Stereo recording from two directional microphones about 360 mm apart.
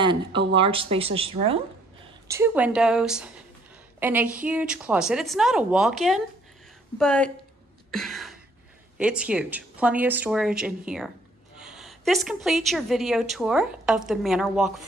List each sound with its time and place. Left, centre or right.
0.0 s a woman's voice: centre
7.9 s a sound: centre
8.9 s a woman's voice: centre